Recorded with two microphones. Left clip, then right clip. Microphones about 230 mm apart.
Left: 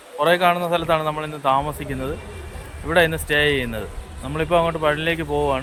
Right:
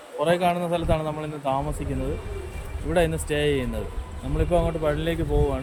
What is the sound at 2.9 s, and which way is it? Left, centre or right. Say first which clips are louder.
A man's voice: left 6 dB; centre.